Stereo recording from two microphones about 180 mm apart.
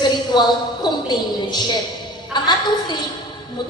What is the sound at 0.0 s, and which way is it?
A woman's voice, 25° left (ahead or behind).